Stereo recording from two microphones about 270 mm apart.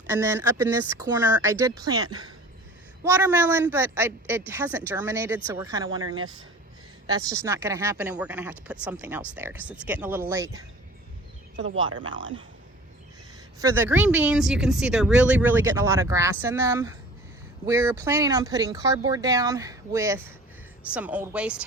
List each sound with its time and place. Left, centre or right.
0.1 s speech: centre
7.1 s speech: centre
11.9 s speech: centre
13.6 s speech: centre